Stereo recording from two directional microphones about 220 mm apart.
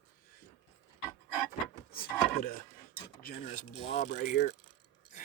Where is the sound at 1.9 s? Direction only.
40° left (ahead or behind).